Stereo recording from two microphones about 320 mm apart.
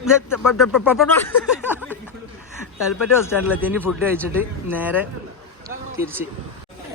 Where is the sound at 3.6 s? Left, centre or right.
Centre.